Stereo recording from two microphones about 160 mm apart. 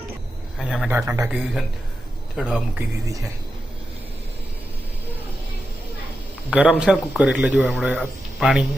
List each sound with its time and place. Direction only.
0.9 s speech: 15° right (ahead or behind)
2.3 s speech: 5° right (ahead or behind)
6.5 s speech: 5° right (ahead or behind)